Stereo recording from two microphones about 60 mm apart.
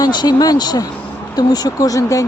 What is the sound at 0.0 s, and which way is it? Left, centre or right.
Speech, left.